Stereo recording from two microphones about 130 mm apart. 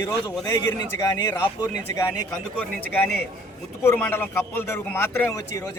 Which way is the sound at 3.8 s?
15° left (ahead or behind).